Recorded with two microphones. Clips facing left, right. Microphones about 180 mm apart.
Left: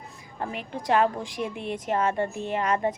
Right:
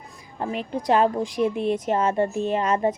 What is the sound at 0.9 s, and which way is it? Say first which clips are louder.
A woman's voice: right 3 dB; 25° right (ahead or behind).